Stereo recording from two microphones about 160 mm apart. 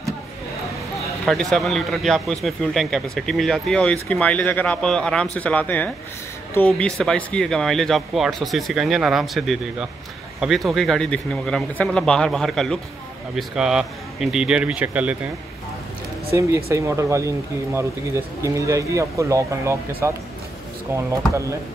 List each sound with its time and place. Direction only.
1.2 s a man's voice: centre (ahead or behind)
16.3 s speech: 15° right (ahead or behind)